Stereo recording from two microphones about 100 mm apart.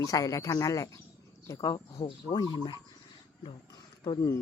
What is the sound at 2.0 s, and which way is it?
Speech, 50° left (ahead or behind).